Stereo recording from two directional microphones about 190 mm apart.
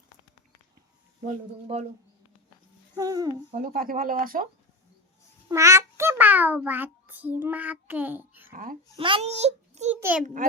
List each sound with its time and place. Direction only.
1.6 s a child's voice: 35° right (ahead or behind)
2.9 s speech: 20° right (ahead or behind)
3.5 s speech: 50° right (ahead or behind)
5.5 s a child's voice: 15° right (ahead or behind)
8.4 s speech: 45° right (ahead or behind)
9.0 s a child's voice: 30° right (ahead or behind)
10.0 s a child's voice: 10° right (ahead or behind)